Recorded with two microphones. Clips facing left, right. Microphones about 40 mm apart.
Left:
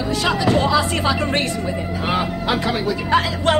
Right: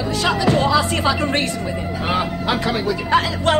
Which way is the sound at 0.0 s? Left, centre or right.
Centre.